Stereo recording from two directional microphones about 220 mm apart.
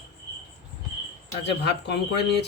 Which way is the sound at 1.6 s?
50° left (ahead or behind).